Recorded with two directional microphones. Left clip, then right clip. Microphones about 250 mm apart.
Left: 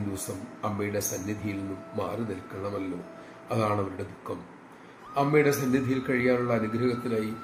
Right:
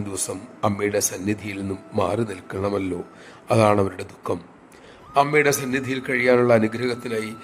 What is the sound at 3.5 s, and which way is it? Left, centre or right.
A man's voice, right.